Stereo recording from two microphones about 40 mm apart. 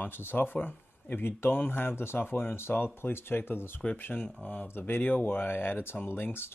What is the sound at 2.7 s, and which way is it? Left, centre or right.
Speech, left.